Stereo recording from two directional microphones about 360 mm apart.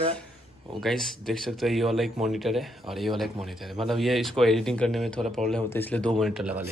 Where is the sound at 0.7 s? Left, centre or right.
Centre.